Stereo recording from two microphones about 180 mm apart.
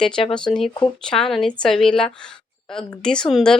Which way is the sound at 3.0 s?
5° left (ahead or behind).